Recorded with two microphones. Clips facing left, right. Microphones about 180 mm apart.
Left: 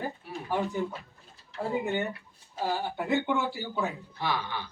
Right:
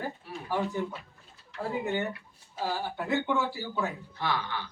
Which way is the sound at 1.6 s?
20° left (ahead or behind).